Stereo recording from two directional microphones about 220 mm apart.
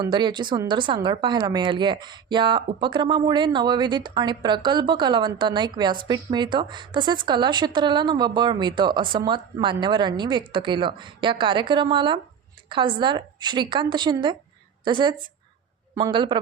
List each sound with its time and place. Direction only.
0.0 s speech: 20° right (ahead or behind)